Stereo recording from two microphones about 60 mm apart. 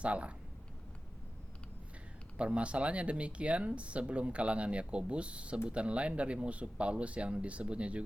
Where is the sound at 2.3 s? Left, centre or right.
Centre.